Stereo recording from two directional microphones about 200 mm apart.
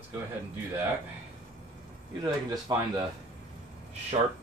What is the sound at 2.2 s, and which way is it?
Speech, 20° right (ahead or behind).